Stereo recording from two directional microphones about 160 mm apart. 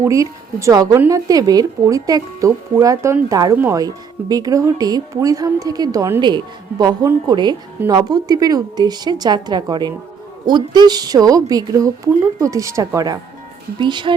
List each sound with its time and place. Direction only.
0.0 s speech: 20° right (ahead or behind)